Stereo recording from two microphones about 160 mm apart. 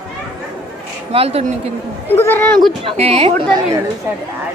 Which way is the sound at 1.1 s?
40° right (ahead or behind).